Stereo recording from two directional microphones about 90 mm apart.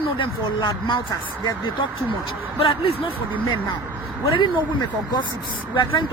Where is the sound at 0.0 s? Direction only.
65° left (ahead or behind).